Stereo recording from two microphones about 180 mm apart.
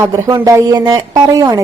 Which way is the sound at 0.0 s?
15° right (ahead or behind).